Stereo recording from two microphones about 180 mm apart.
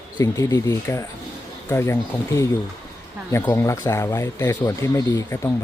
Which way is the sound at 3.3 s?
15° left (ahead or behind).